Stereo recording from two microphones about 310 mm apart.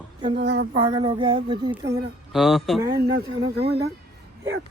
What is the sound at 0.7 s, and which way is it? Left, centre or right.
Speech, centre.